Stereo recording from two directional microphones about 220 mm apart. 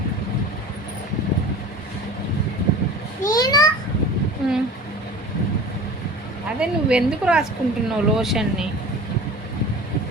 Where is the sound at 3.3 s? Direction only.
15° left (ahead or behind).